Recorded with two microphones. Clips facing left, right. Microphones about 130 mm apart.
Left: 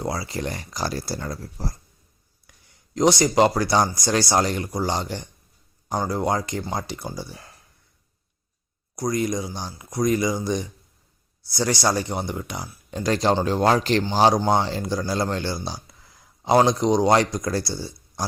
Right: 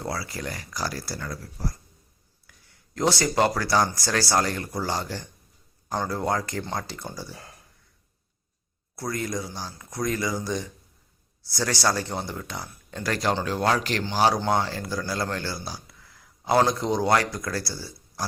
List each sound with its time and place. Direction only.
0.0 s speech: 20° left (ahead or behind)
9.0 s speech: 15° left (ahead or behind)